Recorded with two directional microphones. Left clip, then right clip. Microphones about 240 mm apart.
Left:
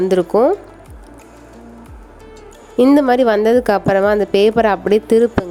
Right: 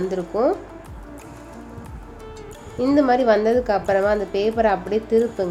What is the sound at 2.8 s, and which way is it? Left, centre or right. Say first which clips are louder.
A woman's voice: left 6 dB; left.